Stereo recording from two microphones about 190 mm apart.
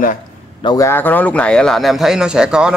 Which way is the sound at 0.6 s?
20° left (ahead or behind).